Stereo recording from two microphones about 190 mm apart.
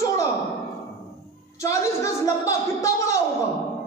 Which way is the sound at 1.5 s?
15° left (ahead or behind).